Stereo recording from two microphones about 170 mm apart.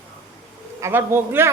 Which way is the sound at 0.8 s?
15° right (ahead or behind).